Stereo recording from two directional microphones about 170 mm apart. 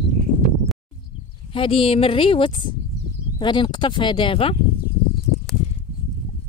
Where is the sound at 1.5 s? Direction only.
35° left (ahead or behind).